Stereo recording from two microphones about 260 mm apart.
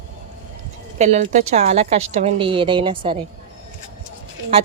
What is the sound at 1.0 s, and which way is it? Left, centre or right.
A woman's voice, right.